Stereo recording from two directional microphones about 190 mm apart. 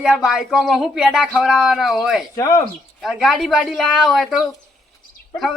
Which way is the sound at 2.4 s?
20° left (ahead or behind).